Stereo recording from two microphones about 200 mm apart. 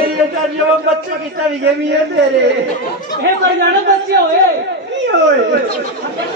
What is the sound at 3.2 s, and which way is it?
Speech, 55° right (ahead or behind).